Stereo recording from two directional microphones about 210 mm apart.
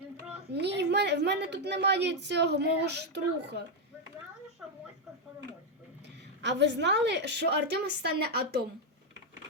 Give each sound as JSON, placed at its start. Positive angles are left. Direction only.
{"t": 0.5, "sound": "a woman's voice", "side_deg": -55}
{"t": 6.4, "sound": "a woman's voice", "side_deg": -55}